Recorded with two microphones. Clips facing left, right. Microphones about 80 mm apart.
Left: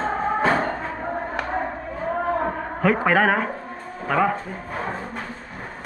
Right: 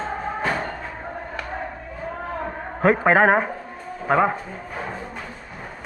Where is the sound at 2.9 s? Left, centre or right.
Right.